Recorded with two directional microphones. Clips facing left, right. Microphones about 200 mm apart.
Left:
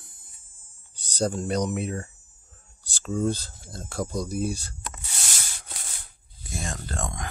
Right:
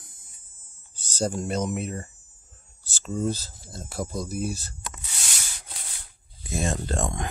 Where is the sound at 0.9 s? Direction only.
5° right (ahead or behind).